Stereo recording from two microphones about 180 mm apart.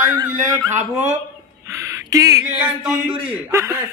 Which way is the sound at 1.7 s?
15° right (ahead or behind).